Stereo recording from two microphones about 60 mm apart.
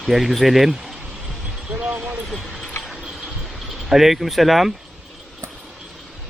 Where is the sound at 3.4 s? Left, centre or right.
Centre.